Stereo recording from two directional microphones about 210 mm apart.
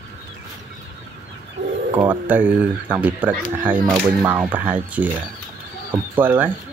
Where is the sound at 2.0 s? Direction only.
10° right (ahead or behind).